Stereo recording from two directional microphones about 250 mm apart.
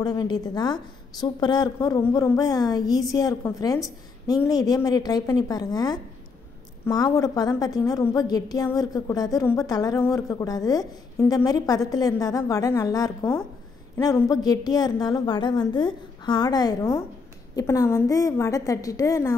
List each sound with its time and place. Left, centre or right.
0.0 s a woman's voice: centre